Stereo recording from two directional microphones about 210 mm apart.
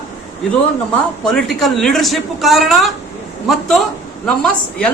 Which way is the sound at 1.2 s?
5° left (ahead or behind).